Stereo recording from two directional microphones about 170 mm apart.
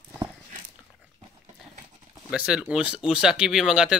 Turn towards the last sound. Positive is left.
turn(degrees=-5)  # may be behind; listen again after turning